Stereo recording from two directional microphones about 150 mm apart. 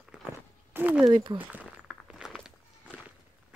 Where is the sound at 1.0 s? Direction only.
35° right (ahead or behind).